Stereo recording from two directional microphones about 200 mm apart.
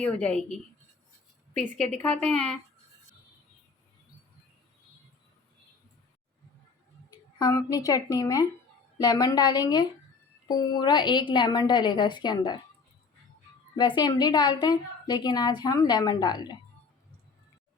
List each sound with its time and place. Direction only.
0.0 s a woman's voice: 5° left (ahead or behind)
7.3 s a woman's voice: 20° left (ahead or behind)
13.7 s a woman's voice: 20° left (ahead or behind)